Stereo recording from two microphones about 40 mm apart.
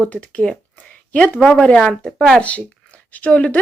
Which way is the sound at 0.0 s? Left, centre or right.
Left.